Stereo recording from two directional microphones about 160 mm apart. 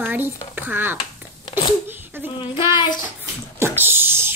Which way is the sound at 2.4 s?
30° left (ahead or behind).